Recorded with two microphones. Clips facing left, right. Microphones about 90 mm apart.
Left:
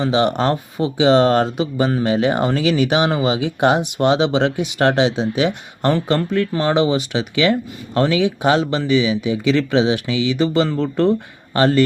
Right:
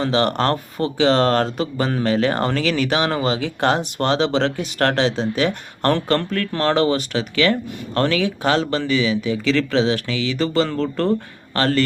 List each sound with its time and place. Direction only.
0.0 s speech: 5° left (ahead or behind)